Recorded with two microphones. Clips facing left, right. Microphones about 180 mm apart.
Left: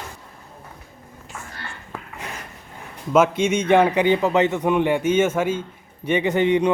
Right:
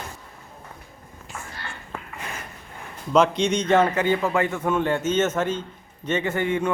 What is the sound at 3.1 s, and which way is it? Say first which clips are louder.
A man's voice: left 2 dB; 5° left (ahead or behind).